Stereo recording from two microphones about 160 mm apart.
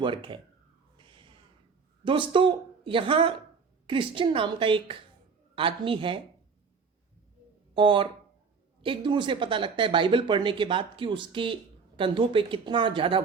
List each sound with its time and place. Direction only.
0.0 s speech: 30° right (ahead or behind)
0.9 s a sound: 30° right (ahead or behind)
2.0 s speech: 30° right (ahead or behind)
7.7 s speech: 30° right (ahead or behind)